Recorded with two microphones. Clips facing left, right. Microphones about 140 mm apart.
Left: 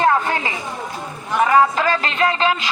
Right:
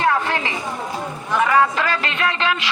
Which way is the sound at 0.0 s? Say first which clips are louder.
Left 2 dB; 45° left (ahead or behind).